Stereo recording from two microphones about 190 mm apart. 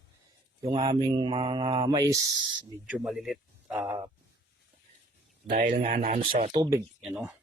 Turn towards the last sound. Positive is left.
turn(degrees=-5)  # may be behind; listen again after turning